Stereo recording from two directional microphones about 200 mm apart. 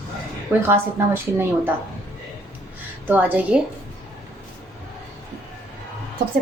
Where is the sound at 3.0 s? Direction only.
10° right (ahead or behind).